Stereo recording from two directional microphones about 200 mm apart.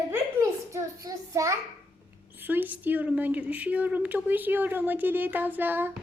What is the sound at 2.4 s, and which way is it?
A woman's voice, 10° right (ahead or behind).